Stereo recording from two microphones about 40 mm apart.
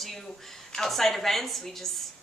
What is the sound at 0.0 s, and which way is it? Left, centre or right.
A woman's voice, centre.